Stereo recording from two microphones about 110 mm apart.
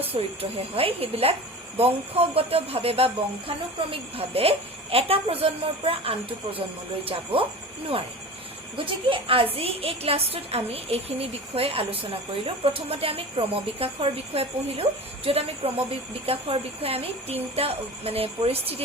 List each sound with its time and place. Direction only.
0.0 s a woman's voice: 60° right (ahead or behind)
8.7 s a woman's voice: 55° right (ahead or behind)